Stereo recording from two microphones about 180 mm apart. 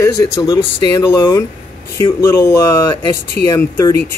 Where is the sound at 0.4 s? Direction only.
25° left (ahead or behind).